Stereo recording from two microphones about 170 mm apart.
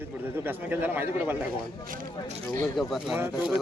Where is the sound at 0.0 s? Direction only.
10° right (ahead or behind).